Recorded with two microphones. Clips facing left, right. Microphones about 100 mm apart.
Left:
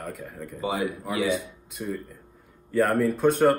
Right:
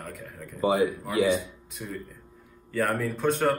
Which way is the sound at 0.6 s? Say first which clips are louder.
Right 4 dB; 35° right (ahead or behind).